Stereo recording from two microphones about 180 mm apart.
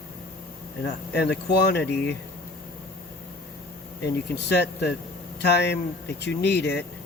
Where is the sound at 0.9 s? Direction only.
65° left (ahead or behind).